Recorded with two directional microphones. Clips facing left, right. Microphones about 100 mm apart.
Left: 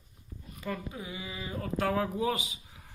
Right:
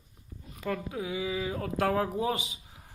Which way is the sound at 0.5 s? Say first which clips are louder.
Right 4 dB; 65° right (ahead or behind).